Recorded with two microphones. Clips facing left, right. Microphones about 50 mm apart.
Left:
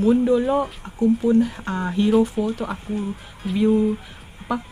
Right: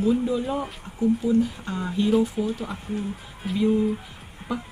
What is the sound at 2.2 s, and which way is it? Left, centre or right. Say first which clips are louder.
Speech: left 4 dB; left.